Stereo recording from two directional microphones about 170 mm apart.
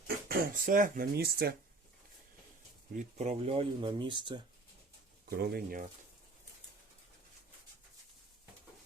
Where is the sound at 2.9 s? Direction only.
40° right (ahead or behind).